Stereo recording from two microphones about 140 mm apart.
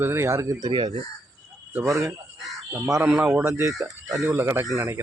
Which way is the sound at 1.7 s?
20° right (ahead or behind).